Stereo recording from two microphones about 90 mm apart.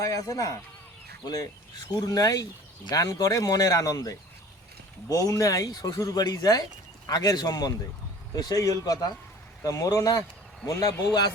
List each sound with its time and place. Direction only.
0.0 s a man's voice: 40° left (ahead or behind)